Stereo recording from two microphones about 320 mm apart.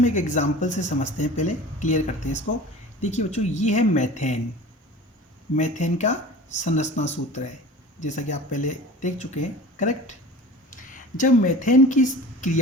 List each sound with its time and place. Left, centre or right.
0.0 s speech: left
5.5 s speech: left
11.2 s speech: left